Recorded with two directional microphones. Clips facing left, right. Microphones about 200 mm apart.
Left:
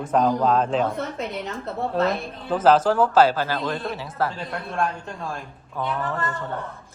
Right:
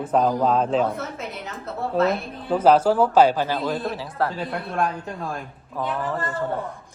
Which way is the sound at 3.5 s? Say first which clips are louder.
Right 2 dB; 5° right (ahead or behind).